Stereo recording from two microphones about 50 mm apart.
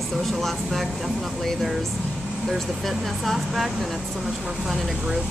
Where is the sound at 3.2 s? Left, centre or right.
Centre.